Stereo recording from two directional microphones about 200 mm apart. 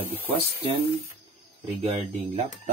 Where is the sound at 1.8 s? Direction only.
30° right (ahead or behind).